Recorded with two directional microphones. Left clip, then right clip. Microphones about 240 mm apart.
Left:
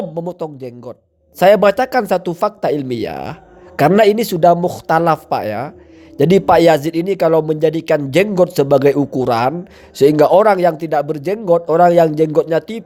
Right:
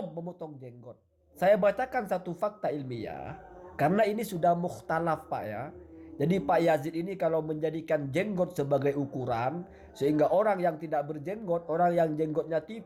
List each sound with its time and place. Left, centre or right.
0.3 s speech: left